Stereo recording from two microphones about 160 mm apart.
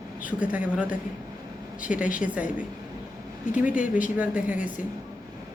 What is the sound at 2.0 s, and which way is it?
Speech, 55° left (ahead or behind).